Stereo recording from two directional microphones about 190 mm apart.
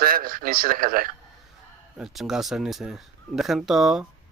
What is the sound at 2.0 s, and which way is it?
Speech, centre (ahead or behind).